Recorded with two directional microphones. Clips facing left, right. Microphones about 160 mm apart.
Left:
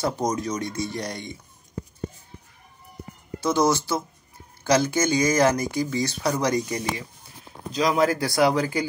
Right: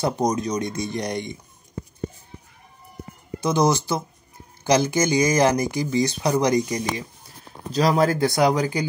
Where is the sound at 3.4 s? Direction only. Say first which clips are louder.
Right 1 dB; 20° right (ahead or behind).